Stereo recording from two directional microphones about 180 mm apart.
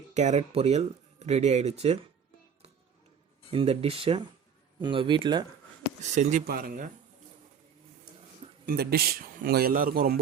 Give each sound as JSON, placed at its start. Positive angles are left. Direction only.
{"t": 0.1, "sound": "speech", "side_deg": -40}
{"t": 3.5, "sound": "speech", "side_deg": -30}
{"t": 6.0, "sound": "speech", "side_deg": -40}
{"t": 8.6, "sound": "a man's voice", "side_deg": -60}